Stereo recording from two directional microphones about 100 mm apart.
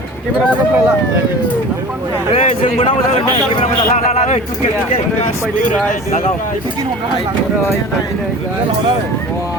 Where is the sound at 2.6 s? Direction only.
65° left (ahead or behind).